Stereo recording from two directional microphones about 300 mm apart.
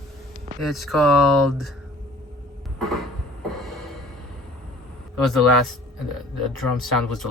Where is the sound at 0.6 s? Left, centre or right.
Centre.